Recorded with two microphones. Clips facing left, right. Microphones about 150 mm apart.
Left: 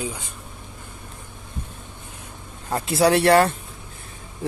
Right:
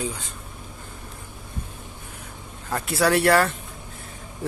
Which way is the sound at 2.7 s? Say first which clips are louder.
Left 3 dB; 20° left (ahead or behind).